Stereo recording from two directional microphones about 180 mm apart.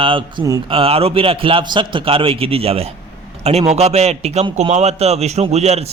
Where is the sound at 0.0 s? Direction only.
25° right (ahead or behind).